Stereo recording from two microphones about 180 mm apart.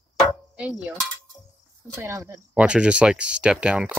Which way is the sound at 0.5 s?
5° right (ahead or behind).